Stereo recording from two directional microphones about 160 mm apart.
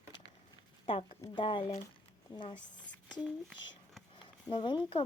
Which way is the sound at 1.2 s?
30° left (ahead or behind).